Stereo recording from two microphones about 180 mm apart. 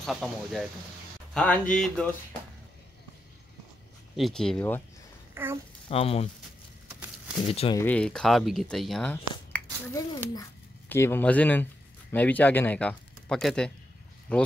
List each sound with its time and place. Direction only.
0.0 s speech: centre (ahead or behind)
4.2 s speech: 5° left (ahead or behind)
5.3 s a child's voice: 15° right (ahead or behind)
5.9 s speech: 35° left (ahead or behind)
7.4 s speech: 35° left (ahead or behind)
7.7 s speech: 10° left (ahead or behind)
9.5 s a sound: 15° left (ahead or behind)
10.9 s speech: 10° left (ahead or behind)